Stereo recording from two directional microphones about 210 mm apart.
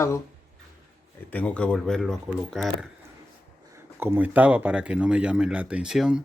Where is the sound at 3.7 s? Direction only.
10° right (ahead or behind).